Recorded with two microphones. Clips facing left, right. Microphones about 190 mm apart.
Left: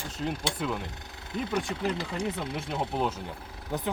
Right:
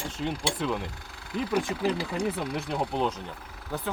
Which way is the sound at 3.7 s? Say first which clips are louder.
Left 1 dB; 20° left (ahead or behind).